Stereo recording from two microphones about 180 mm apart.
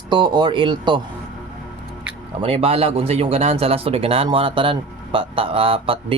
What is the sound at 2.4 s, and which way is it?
Speech, 30° right (ahead or behind).